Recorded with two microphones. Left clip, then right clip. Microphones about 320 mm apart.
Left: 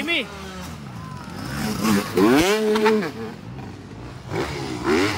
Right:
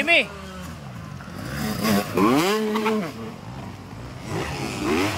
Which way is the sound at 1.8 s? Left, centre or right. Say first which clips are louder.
Left 2 dB; centre.